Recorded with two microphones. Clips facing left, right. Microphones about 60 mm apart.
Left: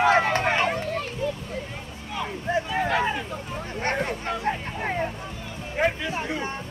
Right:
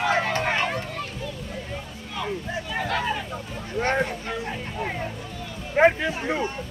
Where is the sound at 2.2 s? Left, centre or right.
Centre.